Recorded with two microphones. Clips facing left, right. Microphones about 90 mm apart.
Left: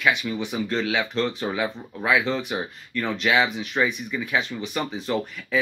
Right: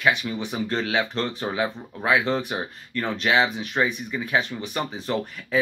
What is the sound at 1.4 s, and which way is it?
Speech, 25° right (ahead or behind).